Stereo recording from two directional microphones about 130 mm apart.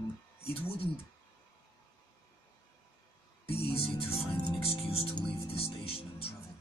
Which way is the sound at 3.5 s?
50° left (ahead or behind).